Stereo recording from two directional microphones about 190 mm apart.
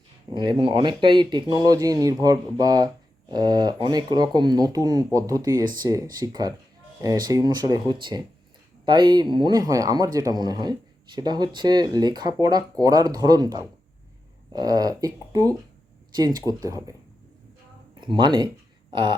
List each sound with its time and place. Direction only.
0.3 s speech: 25° right (ahead or behind)
18.0 s speech: 25° right (ahead or behind)